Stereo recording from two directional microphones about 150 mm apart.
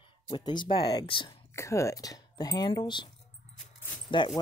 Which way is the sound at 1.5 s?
20° left (ahead or behind).